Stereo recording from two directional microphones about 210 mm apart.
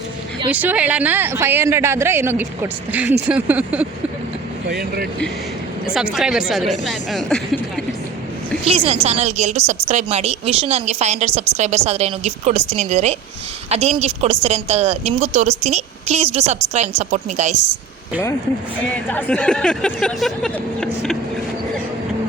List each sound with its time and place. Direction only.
0.5 s speech: 5° right (ahead or behind)
4.7 s speech: 45° right (ahead or behind)
5.8 s speech: 5° right (ahead or behind)
8.6 s a woman's voice: 30° right (ahead or behind)
19.1 s speech: 5° left (ahead or behind)